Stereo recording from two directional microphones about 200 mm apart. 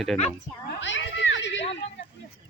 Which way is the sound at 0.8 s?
65° left (ahead or behind).